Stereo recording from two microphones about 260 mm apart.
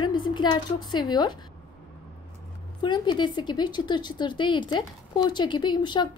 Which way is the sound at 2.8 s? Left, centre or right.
Centre.